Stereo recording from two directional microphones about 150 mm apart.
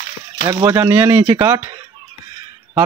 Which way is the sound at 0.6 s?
15° right (ahead or behind).